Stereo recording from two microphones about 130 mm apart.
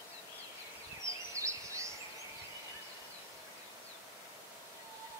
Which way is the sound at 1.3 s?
25° right (ahead or behind).